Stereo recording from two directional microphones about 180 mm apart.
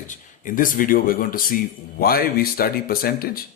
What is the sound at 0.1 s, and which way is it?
Speech, 50° left (ahead or behind).